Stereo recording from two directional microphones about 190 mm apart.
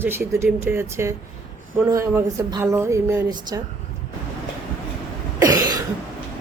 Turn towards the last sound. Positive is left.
turn(degrees=-20)  # may be behind; listen again after turning